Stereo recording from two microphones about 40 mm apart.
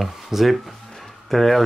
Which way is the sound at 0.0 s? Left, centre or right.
Centre.